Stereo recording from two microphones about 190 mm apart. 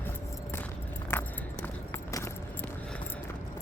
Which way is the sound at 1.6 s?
15° left (ahead or behind).